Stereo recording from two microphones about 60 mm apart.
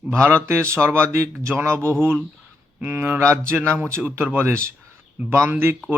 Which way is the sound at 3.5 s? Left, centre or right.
Right.